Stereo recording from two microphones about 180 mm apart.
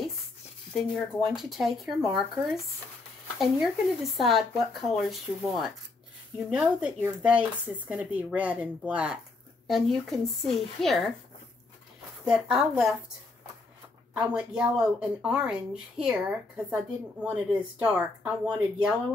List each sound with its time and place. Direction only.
1.1 s a woman's voice: centre (ahead or behind)
12.3 s a woman's voice: centre (ahead or behind)
14.5 s a woman's voice: 5° right (ahead or behind)